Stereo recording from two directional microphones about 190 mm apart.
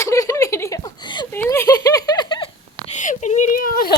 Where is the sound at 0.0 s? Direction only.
15° left (ahead or behind).